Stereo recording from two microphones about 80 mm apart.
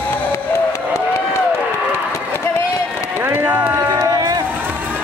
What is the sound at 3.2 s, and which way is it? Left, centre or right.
Music, right.